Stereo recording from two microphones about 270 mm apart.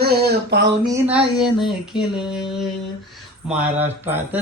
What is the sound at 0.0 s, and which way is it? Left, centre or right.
Speech, right.